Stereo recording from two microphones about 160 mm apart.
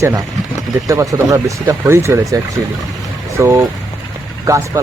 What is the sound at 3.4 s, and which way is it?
Speech, 20° right (ahead or behind).